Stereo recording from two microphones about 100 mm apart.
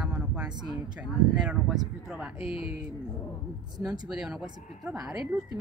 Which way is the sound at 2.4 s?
65° left (ahead or behind).